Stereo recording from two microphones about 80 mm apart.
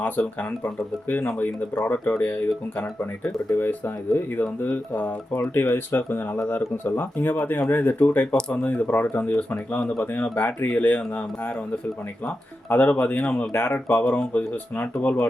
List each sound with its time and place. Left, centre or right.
0.0 s speech: left